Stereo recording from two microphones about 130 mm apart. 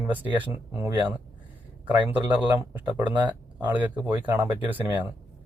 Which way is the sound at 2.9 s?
30° right (ahead or behind).